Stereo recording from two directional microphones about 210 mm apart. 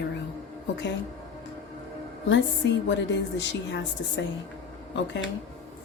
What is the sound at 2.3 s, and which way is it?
A woman's voice, 55° left (ahead or behind).